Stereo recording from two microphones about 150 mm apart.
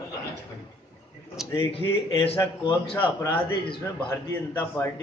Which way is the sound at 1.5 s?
40° left (ahead or behind).